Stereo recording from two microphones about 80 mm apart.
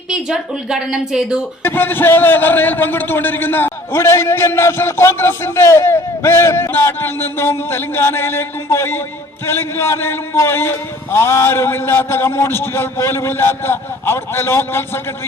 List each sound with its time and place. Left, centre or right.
0.1 s speech: centre
1.6 s a man's voice: left